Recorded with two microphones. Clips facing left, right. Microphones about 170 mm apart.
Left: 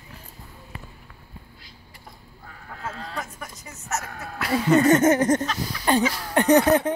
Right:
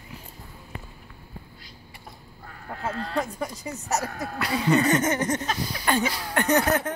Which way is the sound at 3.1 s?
30° right (ahead or behind).